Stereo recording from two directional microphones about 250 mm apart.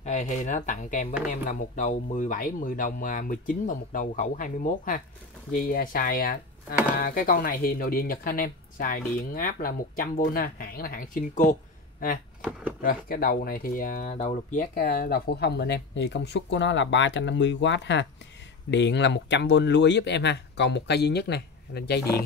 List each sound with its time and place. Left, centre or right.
0.0 s speech: left
12.8 s speech: left